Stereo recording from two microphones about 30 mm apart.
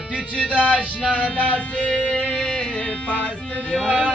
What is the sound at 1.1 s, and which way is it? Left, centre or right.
Music, left.